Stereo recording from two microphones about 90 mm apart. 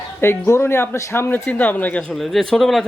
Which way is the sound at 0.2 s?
30° left (ahead or behind).